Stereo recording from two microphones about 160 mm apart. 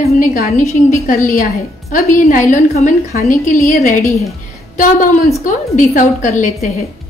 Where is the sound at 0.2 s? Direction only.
60° left (ahead or behind).